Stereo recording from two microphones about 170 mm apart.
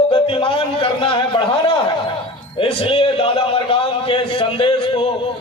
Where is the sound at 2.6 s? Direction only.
35° left (ahead or behind).